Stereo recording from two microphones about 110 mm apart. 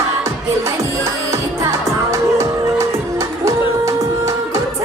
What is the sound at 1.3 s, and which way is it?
Music, 25° right (ahead or behind).